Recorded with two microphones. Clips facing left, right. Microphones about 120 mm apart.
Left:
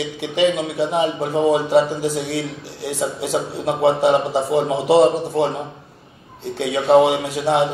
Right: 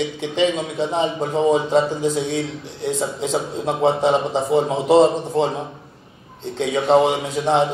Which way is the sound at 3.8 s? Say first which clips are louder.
Left 2 dB; 70° left (ahead or behind).